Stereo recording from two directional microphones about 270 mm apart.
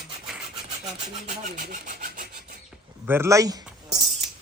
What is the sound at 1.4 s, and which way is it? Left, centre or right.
Rub, right.